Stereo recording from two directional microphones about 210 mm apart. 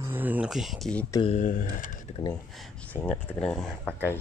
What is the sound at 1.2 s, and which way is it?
Speech, 35° left (ahead or behind).